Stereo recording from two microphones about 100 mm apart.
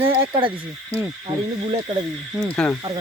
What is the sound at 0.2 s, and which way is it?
Speech, 55° right (ahead or behind).